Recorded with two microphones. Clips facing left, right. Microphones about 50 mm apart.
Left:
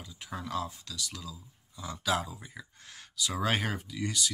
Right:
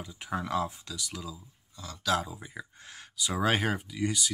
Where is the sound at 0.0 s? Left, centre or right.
Right.